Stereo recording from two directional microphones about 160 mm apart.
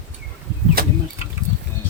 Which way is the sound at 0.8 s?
70° right (ahead or behind).